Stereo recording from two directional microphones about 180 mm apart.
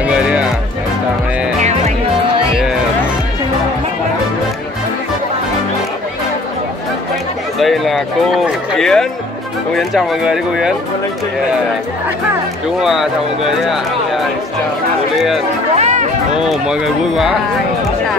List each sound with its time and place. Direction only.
0.0 s music: 5° right (ahead or behind)
7.5 s speech: centre (ahead or behind)
12.8 s speech: centre (ahead or behind)
15.8 s music: 40° right (ahead or behind)
16.3 s speech: 5° right (ahead or behind)